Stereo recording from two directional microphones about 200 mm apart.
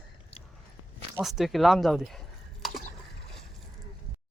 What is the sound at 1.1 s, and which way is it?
Speech, centre (ahead or behind).